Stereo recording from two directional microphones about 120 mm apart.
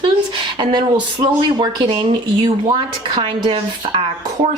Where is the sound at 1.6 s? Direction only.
40° right (ahead or behind).